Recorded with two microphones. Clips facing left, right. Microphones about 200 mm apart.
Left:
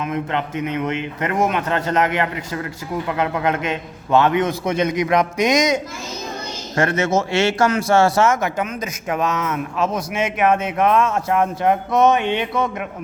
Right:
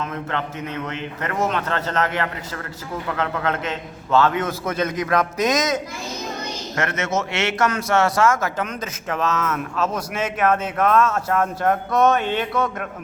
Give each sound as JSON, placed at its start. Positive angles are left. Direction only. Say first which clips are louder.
{"t": 0.0, "sound": "a man's voice", "louder": "left 4 dB", "side_deg": 15}
{"t": 6.7, "sound": "a man's voice", "louder": "left 6 dB", "side_deg": 30}